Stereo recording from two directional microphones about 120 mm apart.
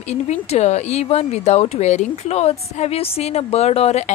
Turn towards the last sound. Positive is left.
turn(degrees=65)  # may be behind; listen again after turning